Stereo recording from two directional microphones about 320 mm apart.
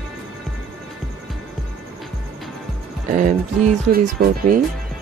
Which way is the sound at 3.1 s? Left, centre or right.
Right.